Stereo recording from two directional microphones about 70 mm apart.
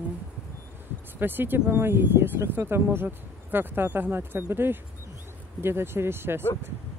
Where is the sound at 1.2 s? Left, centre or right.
Right.